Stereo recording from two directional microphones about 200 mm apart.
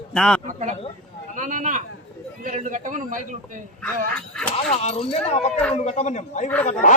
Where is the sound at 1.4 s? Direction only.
40° right (ahead or behind).